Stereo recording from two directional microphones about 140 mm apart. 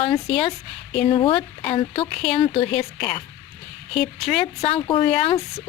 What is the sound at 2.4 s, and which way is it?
Speech, 45° left (ahead or behind).